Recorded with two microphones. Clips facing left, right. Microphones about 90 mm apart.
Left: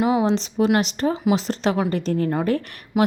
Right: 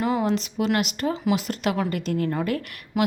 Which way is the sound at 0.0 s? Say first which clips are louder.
Left 4 dB; 15° left (ahead or behind).